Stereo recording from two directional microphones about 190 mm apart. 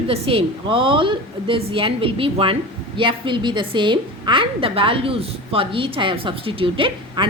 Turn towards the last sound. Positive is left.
turn(degrees=-25)  # may be behind; listen again after turning